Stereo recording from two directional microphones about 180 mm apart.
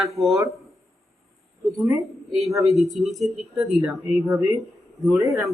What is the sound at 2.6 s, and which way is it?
Speech, centre (ahead or behind).